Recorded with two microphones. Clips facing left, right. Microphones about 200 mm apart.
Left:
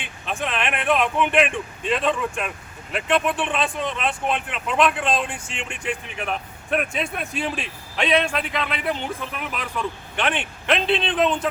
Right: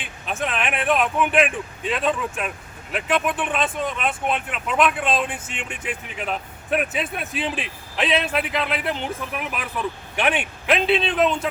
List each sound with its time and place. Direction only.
0.3 s a man's voice: 5° right (ahead or behind)